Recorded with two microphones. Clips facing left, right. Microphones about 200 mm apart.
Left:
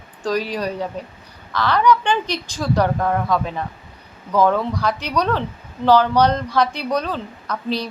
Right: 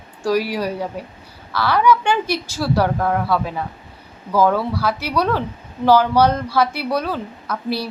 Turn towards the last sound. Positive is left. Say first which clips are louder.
# even
turn(degrees=-10)  # may be behind; listen again after turning